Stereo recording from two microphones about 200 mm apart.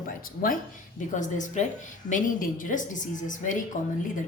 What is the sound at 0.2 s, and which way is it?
Speech, 45° left (ahead or behind).